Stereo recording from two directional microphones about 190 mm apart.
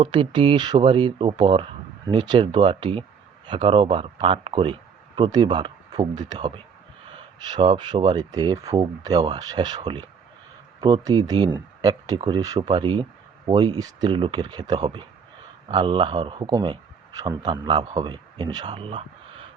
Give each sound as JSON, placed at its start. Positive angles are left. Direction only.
{"t": 0.0, "sound": "speech", "side_deg": -25}